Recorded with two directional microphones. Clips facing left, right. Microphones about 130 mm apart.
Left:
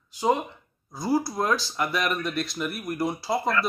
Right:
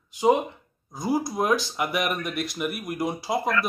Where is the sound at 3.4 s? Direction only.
30° left (ahead or behind).